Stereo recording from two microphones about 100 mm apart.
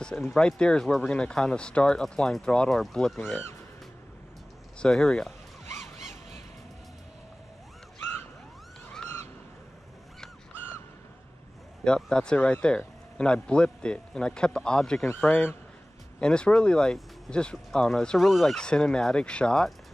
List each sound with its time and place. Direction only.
0.0 s speech: 10° left (ahead or behind)
3.3 s speech: 20° left (ahead or behind)
4.7 s speech: 5° left (ahead or behind)
11.8 s speech: 10° left (ahead or behind)